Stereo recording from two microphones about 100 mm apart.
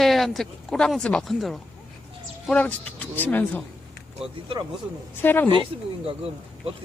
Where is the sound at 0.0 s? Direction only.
Centre (ahead or behind).